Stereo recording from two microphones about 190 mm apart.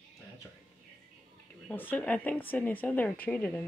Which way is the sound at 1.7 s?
10° left (ahead or behind).